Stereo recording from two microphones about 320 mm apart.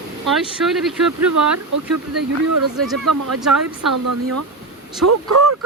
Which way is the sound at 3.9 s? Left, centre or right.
Right.